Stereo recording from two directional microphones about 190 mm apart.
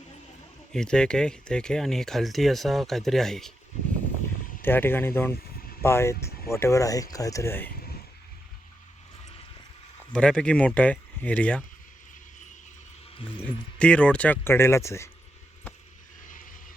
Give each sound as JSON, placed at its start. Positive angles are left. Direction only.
{"t": 0.7, "sound": "speech", "side_deg": 5}
{"t": 4.6, "sound": "speech", "side_deg": 10}
{"t": 10.1, "sound": "speech", "side_deg": 5}
{"t": 13.7, "sound": "speech", "side_deg": 5}
{"t": 16.2, "sound": "mechanisms", "side_deg": 45}